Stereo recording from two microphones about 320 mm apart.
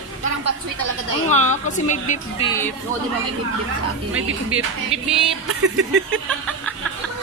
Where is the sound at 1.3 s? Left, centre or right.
Left.